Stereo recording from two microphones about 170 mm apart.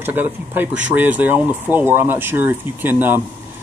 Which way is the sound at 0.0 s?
10° right (ahead or behind).